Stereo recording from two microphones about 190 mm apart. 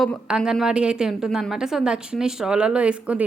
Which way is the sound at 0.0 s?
5° right (ahead or behind).